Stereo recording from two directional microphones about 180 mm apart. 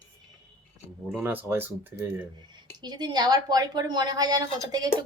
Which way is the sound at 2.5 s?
25° right (ahead or behind).